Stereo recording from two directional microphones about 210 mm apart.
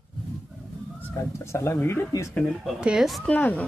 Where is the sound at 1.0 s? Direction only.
15° left (ahead or behind).